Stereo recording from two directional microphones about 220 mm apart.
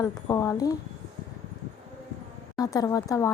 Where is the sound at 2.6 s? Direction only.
15° left (ahead or behind).